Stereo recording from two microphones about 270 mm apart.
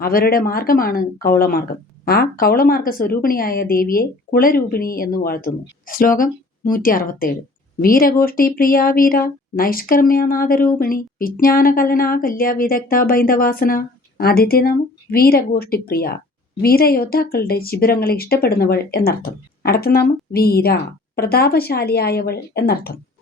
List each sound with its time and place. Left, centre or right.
0.0 s speech: left